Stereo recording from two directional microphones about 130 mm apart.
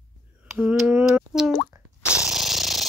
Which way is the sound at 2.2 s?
5° right (ahead or behind).